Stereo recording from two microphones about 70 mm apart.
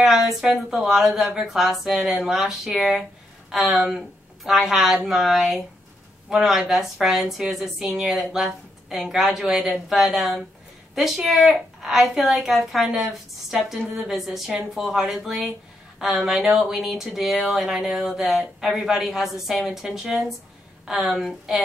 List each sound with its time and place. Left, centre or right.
0.0 s a woman's voice: centre